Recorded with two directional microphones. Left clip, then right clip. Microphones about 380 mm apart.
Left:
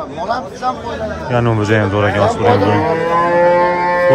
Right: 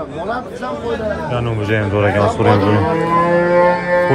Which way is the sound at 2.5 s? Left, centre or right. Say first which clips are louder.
Left 2 dB; left.